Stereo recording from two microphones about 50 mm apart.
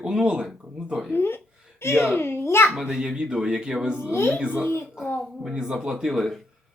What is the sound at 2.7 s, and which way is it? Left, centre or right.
Speech, centre.